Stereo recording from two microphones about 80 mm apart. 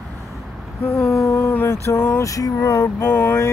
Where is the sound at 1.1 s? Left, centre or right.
Left.